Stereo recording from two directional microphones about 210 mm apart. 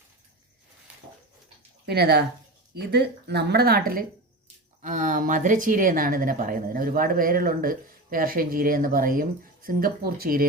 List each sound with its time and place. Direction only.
1.9 s a woman's voice: 50° right (ahead or behind)